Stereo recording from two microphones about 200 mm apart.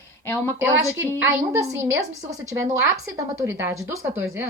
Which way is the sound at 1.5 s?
15° right (ahead or behind).